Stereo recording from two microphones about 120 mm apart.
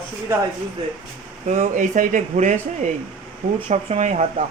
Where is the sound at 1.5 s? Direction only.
85° right.